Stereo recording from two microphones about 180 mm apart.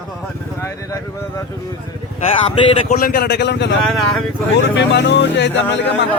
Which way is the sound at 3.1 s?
60° left (ahead or behind).